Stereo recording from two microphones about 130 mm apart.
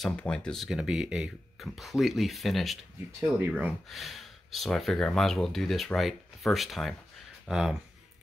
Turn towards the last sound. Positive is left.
turn(degrees=-5)  # may be behind; listen again after turning